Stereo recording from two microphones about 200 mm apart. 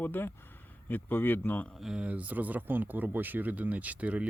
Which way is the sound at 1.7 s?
5° right (ahead or behind).